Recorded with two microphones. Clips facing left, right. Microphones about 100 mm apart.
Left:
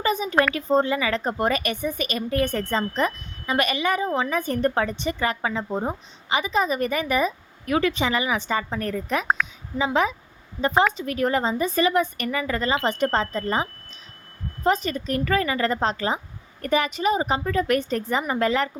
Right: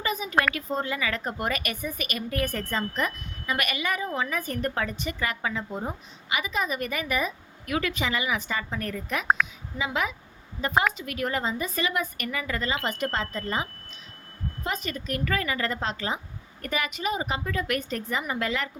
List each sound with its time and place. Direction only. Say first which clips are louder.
0.0 s a woman's voice: left 4 dB; 30° left (ahead or behind)
9.2 s a woman's voice: even; centre (ahead or behind)
9.7 s speech: left 7 dB; 30° left (ahead or behind)
14.6 s speech: left 10 dB; 35° left (ahead or behind)